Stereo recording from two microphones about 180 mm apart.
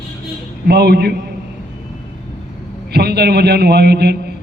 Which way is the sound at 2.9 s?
65° right (ahead or behind).